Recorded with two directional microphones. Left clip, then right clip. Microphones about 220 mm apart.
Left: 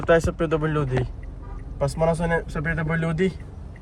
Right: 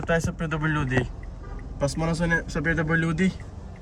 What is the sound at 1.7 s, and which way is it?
Speech, 5° left (ahead or behind).